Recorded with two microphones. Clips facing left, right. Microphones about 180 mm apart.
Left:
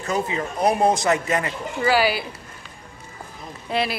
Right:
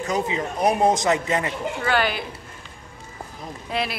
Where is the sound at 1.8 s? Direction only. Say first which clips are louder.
Left 4 dB; 5° left (ahead or behind).